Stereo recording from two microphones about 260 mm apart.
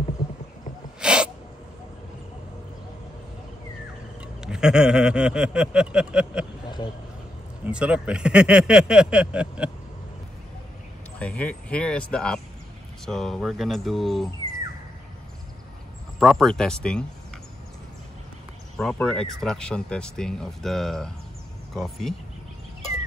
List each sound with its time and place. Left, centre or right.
1.0 s sneeze: centre
4.4 s speech: centre
7.6 s speech: centre
11.1 s speech: centre
16.2 s speech: centre
18.8 s speech: centre